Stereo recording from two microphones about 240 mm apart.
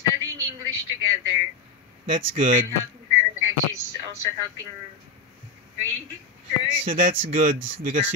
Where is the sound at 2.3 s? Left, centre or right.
Right.